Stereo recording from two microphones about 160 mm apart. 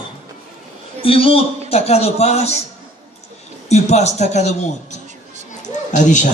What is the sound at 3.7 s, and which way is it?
A man's voice, 45° left (ahead or behind).